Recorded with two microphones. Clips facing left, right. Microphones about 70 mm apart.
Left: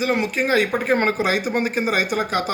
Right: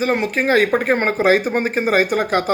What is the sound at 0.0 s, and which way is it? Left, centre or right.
Speech, right.